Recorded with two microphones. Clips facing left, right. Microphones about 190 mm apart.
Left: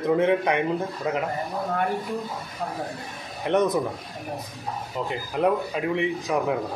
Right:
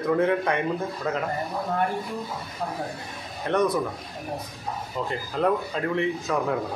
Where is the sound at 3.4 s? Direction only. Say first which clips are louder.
Left 1 dB; 20° left (ahead or behind).